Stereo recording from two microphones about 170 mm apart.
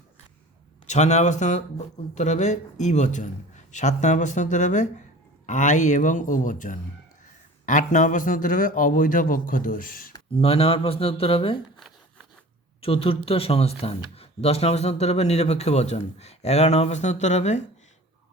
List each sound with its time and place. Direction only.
0.9 s a man's voice: 40° left (ahead or behind)
10.3 s speech: 35° left (ahead or behind)
12.8 s speech: 35° left (ahead or behind)